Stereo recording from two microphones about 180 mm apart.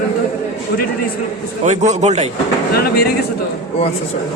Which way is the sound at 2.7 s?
60° left (ahead or behind).